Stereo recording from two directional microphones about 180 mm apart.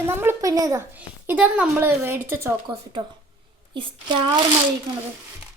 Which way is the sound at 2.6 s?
25° right (ahead or behind).